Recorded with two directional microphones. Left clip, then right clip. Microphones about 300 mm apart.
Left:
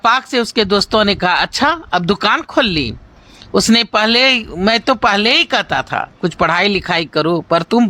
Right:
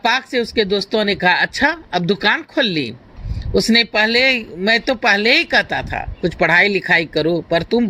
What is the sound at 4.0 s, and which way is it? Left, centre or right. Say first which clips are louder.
Speech: left 2 dB; left.